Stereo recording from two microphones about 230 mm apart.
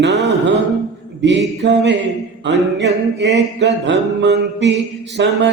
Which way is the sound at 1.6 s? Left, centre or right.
Right.